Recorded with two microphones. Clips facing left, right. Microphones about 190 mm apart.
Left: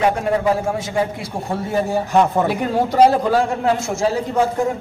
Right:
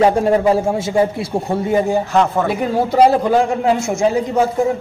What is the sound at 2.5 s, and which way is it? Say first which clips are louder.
A man's voice: right 2 dB; 10° right (ahead or behind).